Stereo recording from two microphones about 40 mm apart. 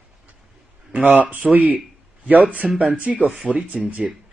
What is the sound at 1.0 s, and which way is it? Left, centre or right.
Speech, right.